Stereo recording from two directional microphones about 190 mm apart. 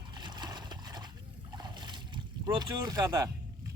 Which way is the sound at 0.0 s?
25° right (ahead or behind).